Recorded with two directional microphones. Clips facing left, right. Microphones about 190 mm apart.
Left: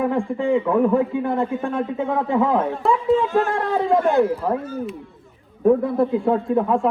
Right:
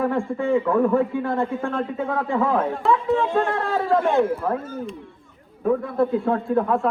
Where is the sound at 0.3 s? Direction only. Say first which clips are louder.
Left 1 dB; 15° left (ahead or behind).